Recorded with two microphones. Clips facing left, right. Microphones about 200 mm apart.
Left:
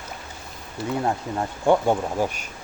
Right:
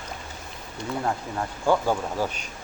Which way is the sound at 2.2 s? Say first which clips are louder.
Left 3 dB; 10° left (ahead or behind).